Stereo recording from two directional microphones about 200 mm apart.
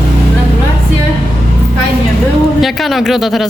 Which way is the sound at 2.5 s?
Centre (ahead or behind).